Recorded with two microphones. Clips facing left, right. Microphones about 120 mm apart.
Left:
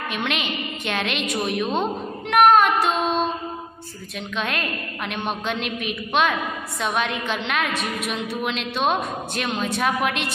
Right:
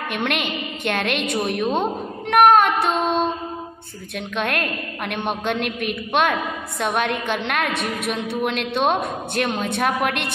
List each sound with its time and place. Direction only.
0.1 s a woman's voice: 55° right (ahead or behind)
2.3 s music: 55° right (ahead or behind)
4.4 s a woman's voice: 55° right (ahead or behind)